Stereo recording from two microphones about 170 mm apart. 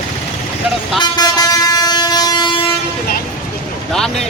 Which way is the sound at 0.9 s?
25° left (ahead or behind).